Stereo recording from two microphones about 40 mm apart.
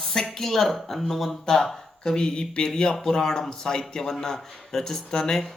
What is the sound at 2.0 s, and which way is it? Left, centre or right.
Speech, centre.